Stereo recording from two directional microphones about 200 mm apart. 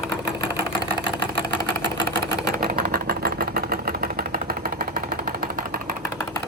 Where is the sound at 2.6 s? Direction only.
50° right (ahead or behind).